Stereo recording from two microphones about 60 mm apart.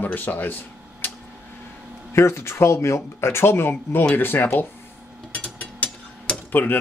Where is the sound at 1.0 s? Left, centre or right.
Left.